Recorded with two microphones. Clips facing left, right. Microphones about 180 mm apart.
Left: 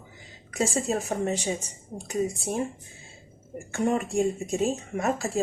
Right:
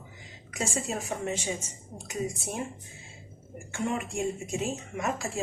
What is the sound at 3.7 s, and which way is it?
Speech, 45° left (ahead or behind).